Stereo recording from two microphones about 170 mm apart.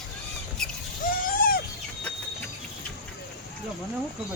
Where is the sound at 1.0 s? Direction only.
50° left (ahead or behind).